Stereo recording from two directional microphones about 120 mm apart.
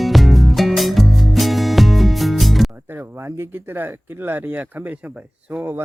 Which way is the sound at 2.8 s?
15° right (ahead or behind).